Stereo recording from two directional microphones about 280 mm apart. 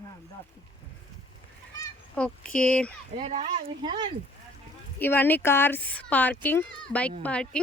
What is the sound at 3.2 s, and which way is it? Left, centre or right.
Speech, right.